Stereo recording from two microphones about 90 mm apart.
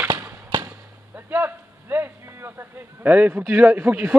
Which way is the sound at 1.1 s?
25° right (ahead or behind).